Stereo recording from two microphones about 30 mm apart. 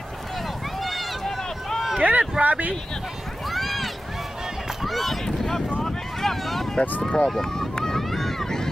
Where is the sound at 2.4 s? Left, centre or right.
Right.